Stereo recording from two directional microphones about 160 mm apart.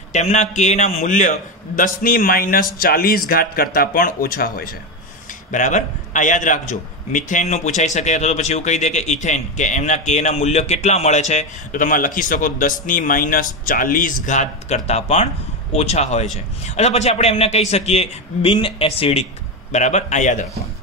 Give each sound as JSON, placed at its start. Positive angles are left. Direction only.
{"t": 0.1, "sound": "a man's voice", "side_deg": 45}
{"t": 1.8, "sound": "a man's voice", "side_deg": 65}
{"t": 5.5, "sound": "a man's voice", "side_deg": 50}